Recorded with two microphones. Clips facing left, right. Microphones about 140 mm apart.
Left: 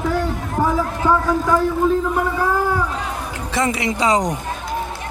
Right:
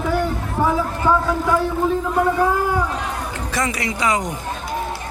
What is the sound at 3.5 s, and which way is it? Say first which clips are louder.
Speech: left 4 dB; 25° left (ahead or behind).